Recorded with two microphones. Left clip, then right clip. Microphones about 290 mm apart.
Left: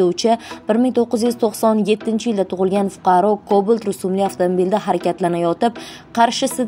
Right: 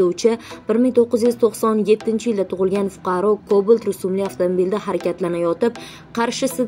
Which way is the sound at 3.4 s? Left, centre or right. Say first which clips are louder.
Even; left.